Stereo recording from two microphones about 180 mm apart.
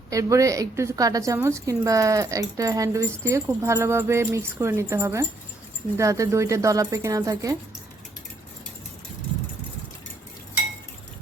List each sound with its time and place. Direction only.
0.1 s speech: 15° right (ahead or behind)